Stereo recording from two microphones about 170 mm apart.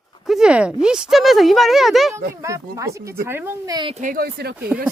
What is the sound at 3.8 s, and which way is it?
Speech, 35° right (ahead or behind).